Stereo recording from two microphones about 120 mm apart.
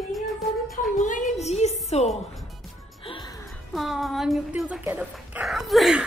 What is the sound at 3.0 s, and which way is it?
Music, 50° left (ahead or behind).